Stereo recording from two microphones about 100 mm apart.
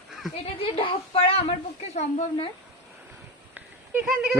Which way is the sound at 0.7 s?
65° left (ahead or behind).